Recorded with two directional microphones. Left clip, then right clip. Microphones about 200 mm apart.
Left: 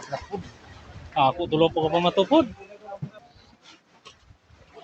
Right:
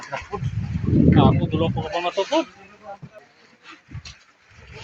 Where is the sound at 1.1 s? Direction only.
25° left (ahead or behind).